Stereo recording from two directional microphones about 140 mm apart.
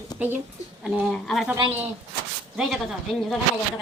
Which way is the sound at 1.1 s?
Centre (ahead or behind).